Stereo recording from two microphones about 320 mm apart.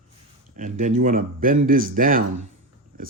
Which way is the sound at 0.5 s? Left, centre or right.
Right.